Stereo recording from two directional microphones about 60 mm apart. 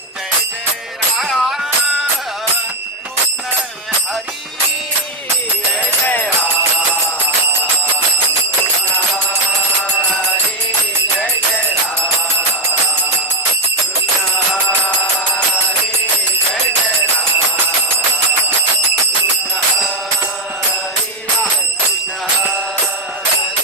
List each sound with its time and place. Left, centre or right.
1.1 s music: centre
6.1 s music: left